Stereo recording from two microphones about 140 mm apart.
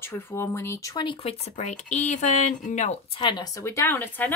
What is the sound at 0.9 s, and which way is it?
Speech, 35° left (ahead or behind).